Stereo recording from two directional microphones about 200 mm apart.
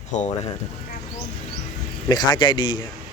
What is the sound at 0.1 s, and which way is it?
Speech, 35° left (ahead or behind).